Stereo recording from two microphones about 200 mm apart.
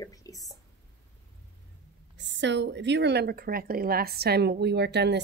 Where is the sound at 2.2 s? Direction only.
60° right (ahead or behind).